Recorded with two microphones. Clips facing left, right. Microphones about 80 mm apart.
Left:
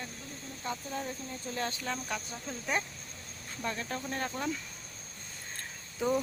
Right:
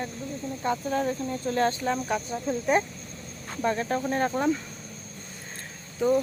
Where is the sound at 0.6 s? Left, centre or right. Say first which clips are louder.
Right 10 dB; right.